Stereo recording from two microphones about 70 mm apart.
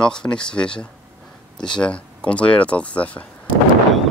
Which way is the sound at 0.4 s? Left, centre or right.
Centre.